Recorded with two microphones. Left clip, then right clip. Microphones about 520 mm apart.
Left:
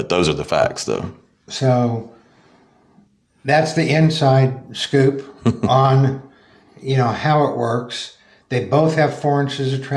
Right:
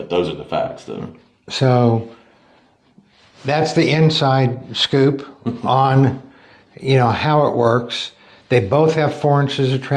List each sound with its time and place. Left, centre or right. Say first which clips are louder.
0.1 s speech: left 2 dB; left
1.5 s speech: right 2 dB; centre
3.4 s speech: even; centre